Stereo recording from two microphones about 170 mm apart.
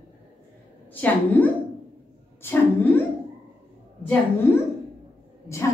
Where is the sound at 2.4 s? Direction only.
10° left (ahead or behind).